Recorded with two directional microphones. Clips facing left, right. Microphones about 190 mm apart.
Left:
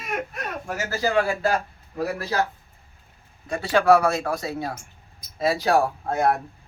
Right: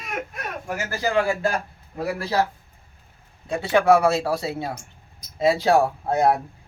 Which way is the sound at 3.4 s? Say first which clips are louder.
Right 1 dB; 20° right (ahead or behind).